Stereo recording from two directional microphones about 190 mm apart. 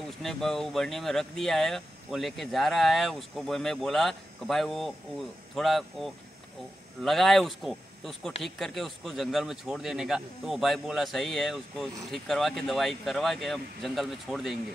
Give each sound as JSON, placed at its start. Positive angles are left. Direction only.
{"t": 0.2, "sound": "speech", "side_deg": 0}